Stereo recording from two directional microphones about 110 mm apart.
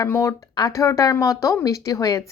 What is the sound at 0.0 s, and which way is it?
A woman's voice, 30° left (ahead or behind).